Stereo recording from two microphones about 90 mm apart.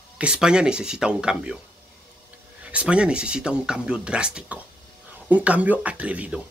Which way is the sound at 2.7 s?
10° right (ahead or behind).